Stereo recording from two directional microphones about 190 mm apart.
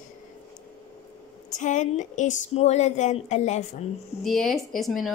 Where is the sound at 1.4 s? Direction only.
40° left (ahead or behind).